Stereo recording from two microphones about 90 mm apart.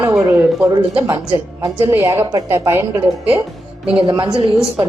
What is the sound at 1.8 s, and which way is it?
A woman's voice, 30° right (ahead or behind).